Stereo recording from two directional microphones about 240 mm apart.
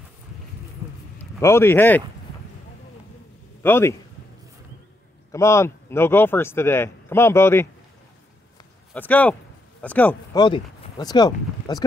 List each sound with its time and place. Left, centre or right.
1.4 s speech: centre
3.6 s speech: centre
5.3 s speech: centre
8.9 s speech: centre
10.4 s speech: centre